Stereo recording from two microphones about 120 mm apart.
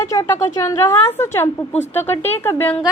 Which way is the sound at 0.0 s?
25° left (ahead or behind).